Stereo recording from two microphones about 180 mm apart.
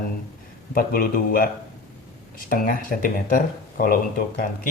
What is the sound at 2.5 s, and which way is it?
Speech, 50° left (ahead or behind).